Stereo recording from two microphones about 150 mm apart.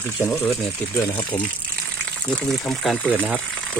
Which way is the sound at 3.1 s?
10° right (ahead or behind).